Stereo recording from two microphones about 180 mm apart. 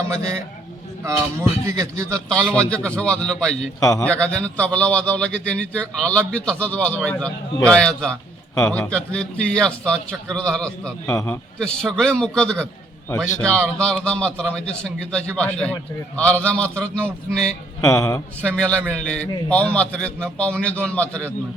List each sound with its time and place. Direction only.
1.0 s a man's voice: 15° right (ahead or behind)
2.5 s a man's voice: 5° left (ahead or behind)
3.8 s a man's voice: 20° left (ahead or behind)
4.0 s a man's voice: 5° left (ahead or behind)
11.1 s a man's voice: 15° left (ahead or behind)
11.6 s a man's voice: 5° left (ahead or behind)
17.8 s a man's voice: 15° left (ahead or behind)
18.5 s a man's voice: 5° left (ahead or behind)